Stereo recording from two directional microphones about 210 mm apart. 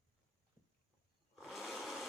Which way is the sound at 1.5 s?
Centre (ahead or behind).